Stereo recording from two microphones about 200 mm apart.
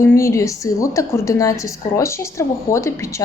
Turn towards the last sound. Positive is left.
turn(degrees=15)  # may be behind; listen again after turning